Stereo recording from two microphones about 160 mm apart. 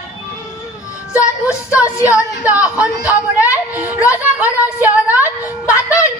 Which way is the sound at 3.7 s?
10° right (ahead or behind).